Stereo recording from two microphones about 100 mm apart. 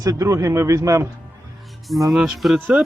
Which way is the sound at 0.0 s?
35° right (ahead or behind).